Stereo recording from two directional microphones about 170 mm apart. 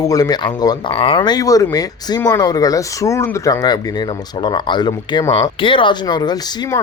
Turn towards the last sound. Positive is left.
turn(degrees=25)  # may be behind; listen again after turning